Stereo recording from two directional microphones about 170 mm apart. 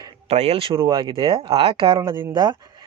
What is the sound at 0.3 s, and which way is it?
Speech, 35° right (ahead or behind).